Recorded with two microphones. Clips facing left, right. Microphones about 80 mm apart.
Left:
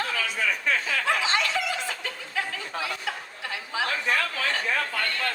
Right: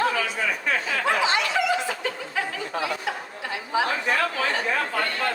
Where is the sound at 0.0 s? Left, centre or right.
Right.